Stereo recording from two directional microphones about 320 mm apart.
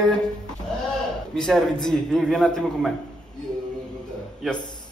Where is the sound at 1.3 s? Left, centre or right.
Centre.